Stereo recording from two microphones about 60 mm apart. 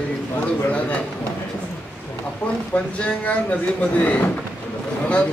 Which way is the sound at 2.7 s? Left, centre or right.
Left.